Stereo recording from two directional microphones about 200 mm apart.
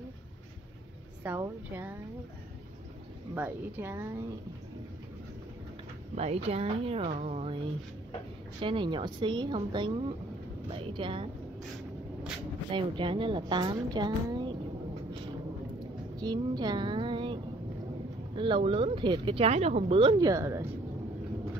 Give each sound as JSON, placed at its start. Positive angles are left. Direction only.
{"t": 1.2, "sound": "speech", "side_deg": -10}
{"t": 3.3, "sound": "speech", "side_deg": -10}
{"t": 6.1, "sound": "speech", "side_deg": -30}
{"t": 8.5, "sound": "speech", "side_deg": -25}
{"t": 12.7, "sound": "speech", "side_deg": -25}
{"t": 16.2, "sound": "speech", "side_deg": -20}